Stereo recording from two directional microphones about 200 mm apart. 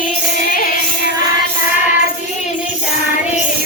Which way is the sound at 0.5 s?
45° left (ahead or behind).